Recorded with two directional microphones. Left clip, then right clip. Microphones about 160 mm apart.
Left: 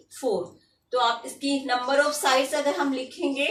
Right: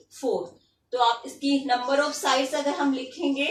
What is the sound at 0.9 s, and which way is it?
A woman's voice, centre (ahead or behind).